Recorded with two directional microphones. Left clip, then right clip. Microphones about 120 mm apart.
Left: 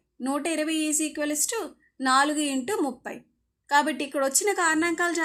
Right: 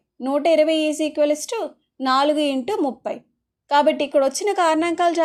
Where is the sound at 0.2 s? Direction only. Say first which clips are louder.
Right 11 dB; 30° right (ahead or behind).